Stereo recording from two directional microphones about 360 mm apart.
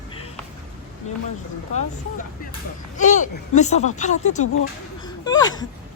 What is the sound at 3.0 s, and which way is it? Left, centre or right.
Speech, left.